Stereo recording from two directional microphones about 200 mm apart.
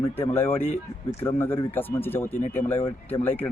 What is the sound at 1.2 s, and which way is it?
Speech, 10° left (ahead or behind).